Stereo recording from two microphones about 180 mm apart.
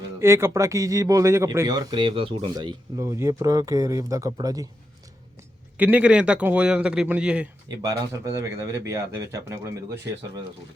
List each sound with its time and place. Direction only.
0.2 s speech: 15° right (ahead or behind)
5.7 s speech: 10° right (ahead or behind)
7.7 s speech: 20° right (ahead or behind)